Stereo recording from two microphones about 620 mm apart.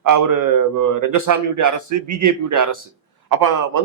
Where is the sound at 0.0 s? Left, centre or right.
Right.